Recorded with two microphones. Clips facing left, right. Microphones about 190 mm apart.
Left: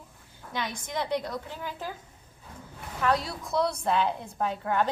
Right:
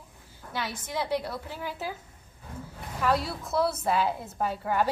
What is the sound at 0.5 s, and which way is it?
A woman's voice, 5° right (ahead or behind).